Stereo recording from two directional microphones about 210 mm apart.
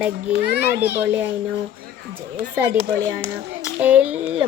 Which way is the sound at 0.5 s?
50° left (ahead or behind).